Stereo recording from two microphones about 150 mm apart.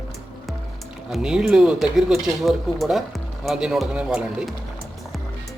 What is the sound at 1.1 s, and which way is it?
Speech, 5° right (ahead or behind).